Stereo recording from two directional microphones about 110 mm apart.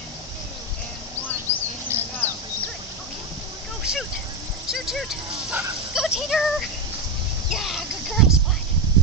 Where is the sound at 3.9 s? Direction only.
5° right (ahead or behind).